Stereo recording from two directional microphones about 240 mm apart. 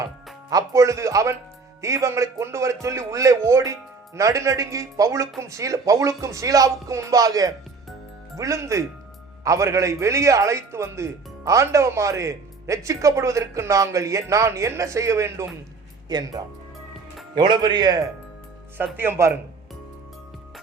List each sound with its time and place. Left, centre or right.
0.5 s a man's voice: centre